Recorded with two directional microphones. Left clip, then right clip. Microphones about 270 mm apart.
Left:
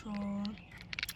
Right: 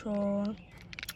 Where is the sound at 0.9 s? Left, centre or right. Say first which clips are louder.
Left 4 dB; centre.